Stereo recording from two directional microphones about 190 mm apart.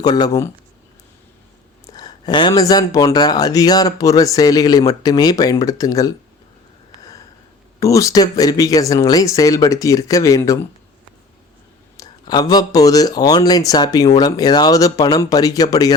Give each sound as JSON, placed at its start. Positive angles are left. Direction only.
{"t": 0.0, "sound": "speech", "side_deg": 20}
{"t": 1.9, "sound": "speech", "side_deg": 20}
{"t": 7.8, "sound": "speech", "side_deg": 15}
{"t": 11.9, "sound": "speech", "side_deg": 20}